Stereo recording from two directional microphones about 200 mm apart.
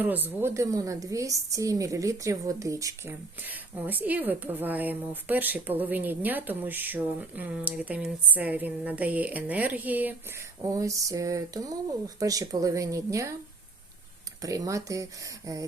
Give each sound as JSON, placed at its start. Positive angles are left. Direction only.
{"t": 0.0, "sound": "a woman's voice", "side_deg": -10}
{"t": 14.4, "sound": "a woman's voice", "side_deg": -15}